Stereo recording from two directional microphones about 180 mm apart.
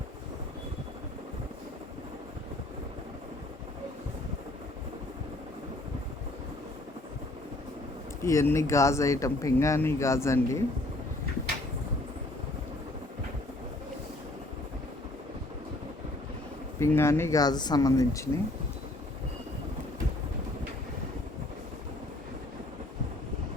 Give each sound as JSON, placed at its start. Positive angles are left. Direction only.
{"t": 8.2, "sound": "speech", "side_deg": 15}
{"t": 16.8, "sound": "speech", "side_deg": 15}